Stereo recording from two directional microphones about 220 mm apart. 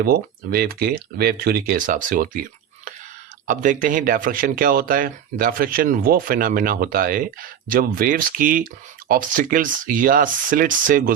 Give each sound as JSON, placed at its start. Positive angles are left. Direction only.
{"t": 0.0, "sound": "speech", "side_deg": -45}